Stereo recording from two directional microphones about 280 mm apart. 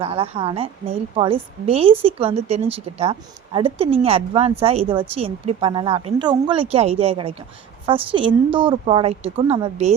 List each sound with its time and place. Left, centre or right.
0.0 s a woman's voice: right